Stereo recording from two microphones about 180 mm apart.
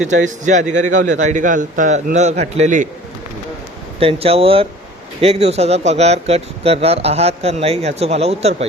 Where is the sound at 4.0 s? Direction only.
30° right (ahead or behind).